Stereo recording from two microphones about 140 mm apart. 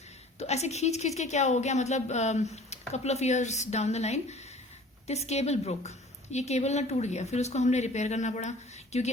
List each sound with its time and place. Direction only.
0.3 s a woman's voice: 50° left (ahead or behind)